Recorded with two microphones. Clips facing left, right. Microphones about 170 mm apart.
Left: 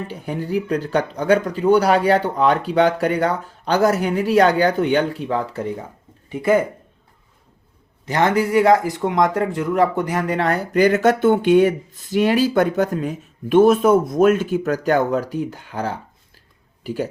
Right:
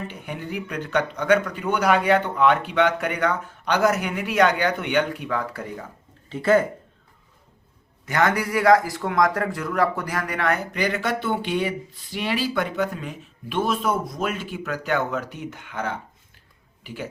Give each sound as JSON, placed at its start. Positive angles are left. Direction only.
{"t": 0.1, "sound": "speech", "side_deg": 35}
{"t": 6.2, "sound": "speech", "side_deg": 15}
{"t": 8.0, "sound": "speech", "side_deg": 25}
{"t": 10.8, "sound": "speech", "side_deg": 45}